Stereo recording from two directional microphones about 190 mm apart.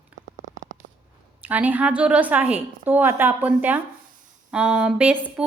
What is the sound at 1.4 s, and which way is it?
A woman's voice, 10° right (ahead or behind).